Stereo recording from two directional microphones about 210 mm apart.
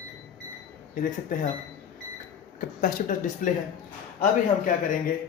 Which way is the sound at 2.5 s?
40° left (ahead or behind).